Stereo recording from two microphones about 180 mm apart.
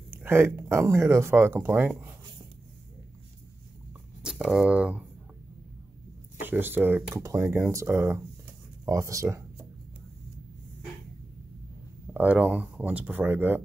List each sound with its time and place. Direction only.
0.1 s speech: 15° right (ahead or behind)
4.2 s speech: 5° right (ahead or behind)
6.4 s speech: 10° right (ahead or behind)
12.1 s speech: 10° right (ahead or behind)